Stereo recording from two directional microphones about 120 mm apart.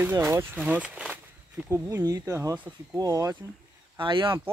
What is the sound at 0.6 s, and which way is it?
Walk, 5° right (ahead or behind).